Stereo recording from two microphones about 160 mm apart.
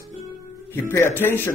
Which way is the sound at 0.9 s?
15° left (ahead or behind).